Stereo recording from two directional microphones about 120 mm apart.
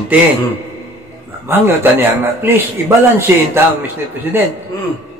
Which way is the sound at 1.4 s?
20° right (ahead or behind).